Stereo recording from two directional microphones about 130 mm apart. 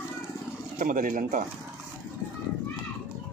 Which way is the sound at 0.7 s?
85° right.